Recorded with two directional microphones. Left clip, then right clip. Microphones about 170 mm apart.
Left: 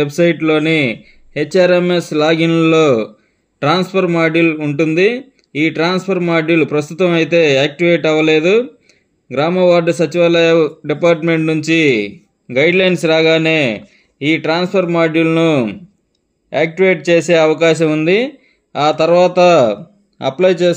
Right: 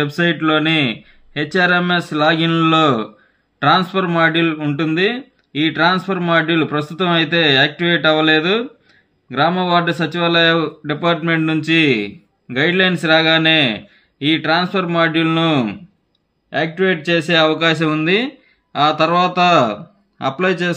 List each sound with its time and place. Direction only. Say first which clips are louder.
0.0 s speech: left 4 dB; 20° left (ahead or behind)
4.8 s speech: left 4 dB; 40° right (ahead or behind)
5.6 s a man's voice: even; 20° left (ahead or behind)